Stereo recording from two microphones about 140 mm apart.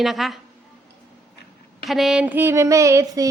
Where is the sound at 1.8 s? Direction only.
Centre (ahead or behind); by 3.3 s 20° right (ahead or behind).